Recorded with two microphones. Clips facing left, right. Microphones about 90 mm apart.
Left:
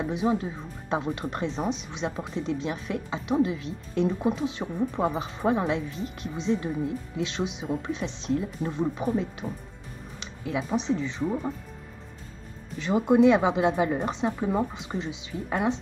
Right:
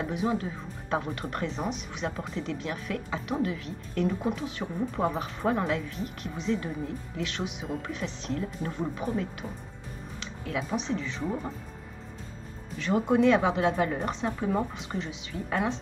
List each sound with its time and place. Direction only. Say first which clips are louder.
0.1 s speech: left 3 dB; 20° left (ahead or behind)
5.8 s speech: left 2 dB; 20° left (ahead or behind)
9.4 s speech: left 4 dB; centre (ahead or behind)
10.4 s speech: left 3 dB; 15° left (ahead or behind)
11.2 s speech: left 4 dB; 5° left (ahead or behind)
12.7 s speech: left 3 dB; 15° left (ahead or behind)